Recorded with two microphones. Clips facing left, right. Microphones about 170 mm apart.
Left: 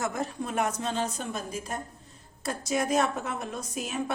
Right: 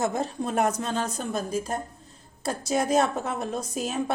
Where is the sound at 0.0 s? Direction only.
30° right (ahead or behind).